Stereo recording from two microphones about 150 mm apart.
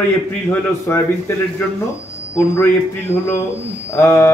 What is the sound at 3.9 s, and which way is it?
Speech, 20° left (ahead or behind).